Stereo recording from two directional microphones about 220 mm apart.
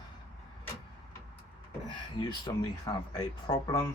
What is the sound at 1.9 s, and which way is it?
Speech, 20° left (ahead or behind).